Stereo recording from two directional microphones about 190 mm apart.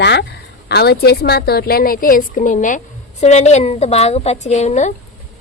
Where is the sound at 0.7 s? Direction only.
60° left (ahead or behind).